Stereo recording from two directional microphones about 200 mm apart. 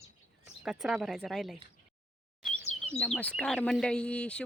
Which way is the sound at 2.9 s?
5° left (ahead or behind).